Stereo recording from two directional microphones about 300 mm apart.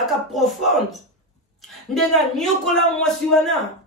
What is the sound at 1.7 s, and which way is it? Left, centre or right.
Speech, centre.